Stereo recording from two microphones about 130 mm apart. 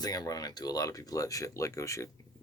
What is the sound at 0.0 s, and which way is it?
Speech, 30° left (ahead or behind).